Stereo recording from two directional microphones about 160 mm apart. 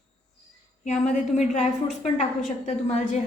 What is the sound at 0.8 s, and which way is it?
A woman's voice, 45° left (ahead or behind).